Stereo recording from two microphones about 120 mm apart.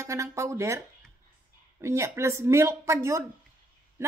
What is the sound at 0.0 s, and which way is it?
Speech, 25° right (ahead or behind).